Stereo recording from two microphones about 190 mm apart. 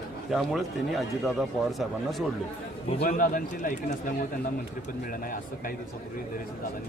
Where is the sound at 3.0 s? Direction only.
45° left (ahead or behind).